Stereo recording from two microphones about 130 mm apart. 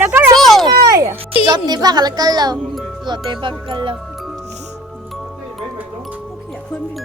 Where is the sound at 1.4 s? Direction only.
35° right (ahead or behind).